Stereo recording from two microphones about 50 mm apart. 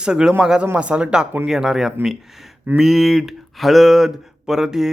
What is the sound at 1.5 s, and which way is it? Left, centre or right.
Speech, centre.